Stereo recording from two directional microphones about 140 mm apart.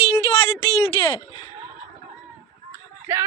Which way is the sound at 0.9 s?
40° left (ahead or behind).